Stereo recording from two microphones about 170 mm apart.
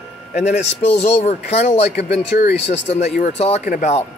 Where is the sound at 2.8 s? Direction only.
40° left (ahead or behind).